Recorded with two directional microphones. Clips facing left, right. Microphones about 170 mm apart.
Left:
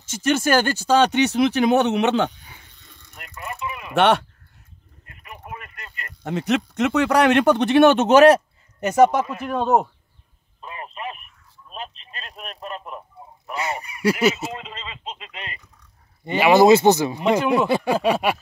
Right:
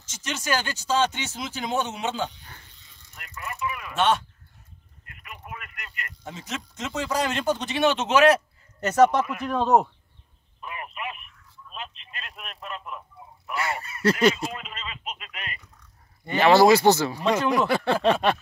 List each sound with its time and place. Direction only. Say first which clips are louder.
0.1 s speech: left 10 dB; 55° left (ahead or behind)
2.7 s a sound: left 6 dB; 55° left (ahead or behind)
3.2 s vehicle: left 1 dB; 30° left (ahead or behind)
3.9 s speech: left 6 dB; 65° left (ahead or behind)
5.0 s a sound: left 3 dB; 30° left (ahead or behind)
6.2 s speech: left 14 dB; 65° left (ahead or behind); by 8.4 s 45° left (ahead or behind)
8.7 s speech: left 3 dB; 15° left (ahead or behind)
10.6 s a sound: left 2 dB; 30° left (ahead or behind)
11.7 s telephone: left 4 dB; 35° left (ahead or behind)
13.6 s fowl: left 2 dB; 20° left (ahead or behind)
14.5 s a sound: left 3 dB; 25° left (ahead or behind)
16.3 s speech: left 3 dB; 15° left (ahead or behind)